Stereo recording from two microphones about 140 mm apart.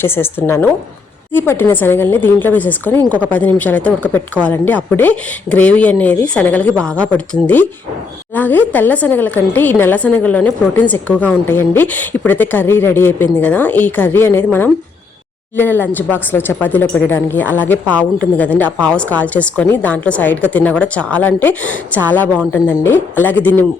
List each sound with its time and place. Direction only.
0.0 s a woman's voice: 15° left (ahead or behind)